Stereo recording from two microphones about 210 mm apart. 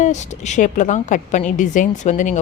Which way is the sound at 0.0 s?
35° left (ahead or behind).